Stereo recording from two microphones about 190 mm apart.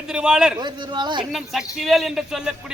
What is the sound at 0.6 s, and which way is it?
Speech, 25° right (ahead or behind).